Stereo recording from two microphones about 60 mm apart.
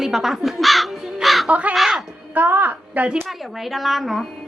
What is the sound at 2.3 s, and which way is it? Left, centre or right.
Speech, right.